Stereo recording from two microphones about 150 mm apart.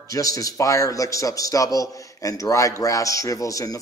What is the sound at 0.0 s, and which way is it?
Speech, 20° left (ahead or behind).